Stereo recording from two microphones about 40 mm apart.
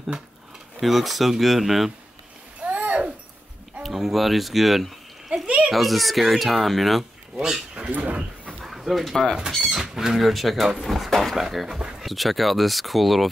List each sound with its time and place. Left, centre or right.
0.7 s speech: centre
2.6 s babbling: right
3.8 s a sound: centre
5.7 s speech: centre
7.3 s speech: centre
7.9 s speech: right
8.6 s a sound: centre
9.6 s speech: centre